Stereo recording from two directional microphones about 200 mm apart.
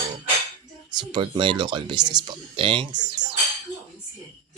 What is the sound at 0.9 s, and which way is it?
Speech, 25° right (ahead or behind).